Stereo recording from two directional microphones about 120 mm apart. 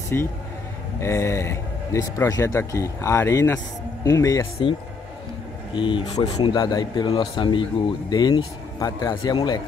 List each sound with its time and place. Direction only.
0.1 s speech: 20° left (ahead or behind)
5.8 s speech: 40° left (ahead or behind)